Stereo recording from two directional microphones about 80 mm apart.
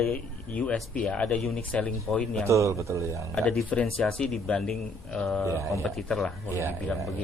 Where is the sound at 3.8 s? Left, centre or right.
Centre.